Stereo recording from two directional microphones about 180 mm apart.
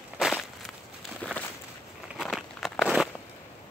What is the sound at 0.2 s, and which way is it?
Crushing, centre (ahead or behind).